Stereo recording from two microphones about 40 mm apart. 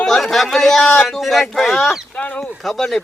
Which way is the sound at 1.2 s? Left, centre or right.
Centre.